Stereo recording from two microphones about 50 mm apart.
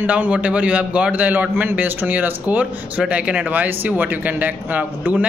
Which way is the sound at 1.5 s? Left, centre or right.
Right.